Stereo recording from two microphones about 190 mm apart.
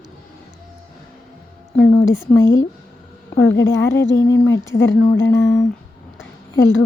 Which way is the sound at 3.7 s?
15° left (ahead or behind).